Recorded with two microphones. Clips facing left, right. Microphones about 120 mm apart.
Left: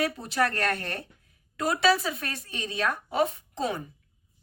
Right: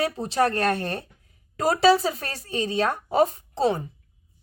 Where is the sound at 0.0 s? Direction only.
30° right (ahead or behind).